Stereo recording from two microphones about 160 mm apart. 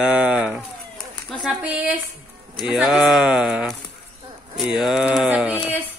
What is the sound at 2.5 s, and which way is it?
A woman's voice, 5° right (ahead or behind).